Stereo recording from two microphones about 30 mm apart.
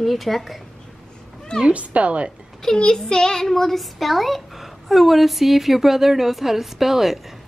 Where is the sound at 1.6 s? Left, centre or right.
Right.